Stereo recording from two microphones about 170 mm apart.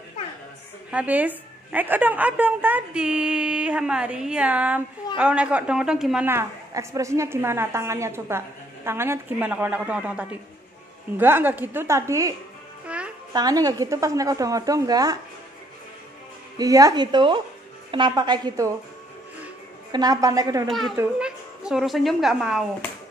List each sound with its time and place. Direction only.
0.9 s a woman's voice: 10° right (ahead or behind)
6.2 s a woman's voice: 15° right (ahead or behind)
12.8 s music: 5° right (ahead or behind)
13.3 s a woman's voice: 20° right (ahead or behind)
16.5 s a woman's voice: 20° right (ahead or behind)
19.9 s a woman's voice: 20° right (ahead or behind)
20.6 s a man's voice: centre (ahead or behind)